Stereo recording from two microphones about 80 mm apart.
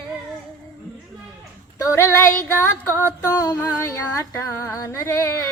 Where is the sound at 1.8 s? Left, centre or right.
Left.